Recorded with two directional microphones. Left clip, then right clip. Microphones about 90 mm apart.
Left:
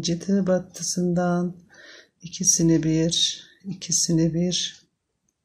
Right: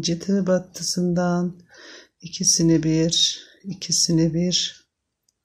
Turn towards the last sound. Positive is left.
turn(degrees=-35)  # may be behind; listen again after turning